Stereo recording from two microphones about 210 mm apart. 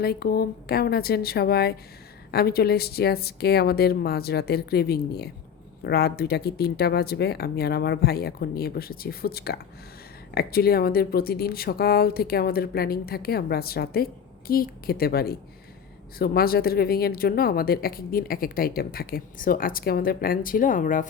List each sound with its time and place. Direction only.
0.0 s a woman's voice: 50° left (ahead or behind)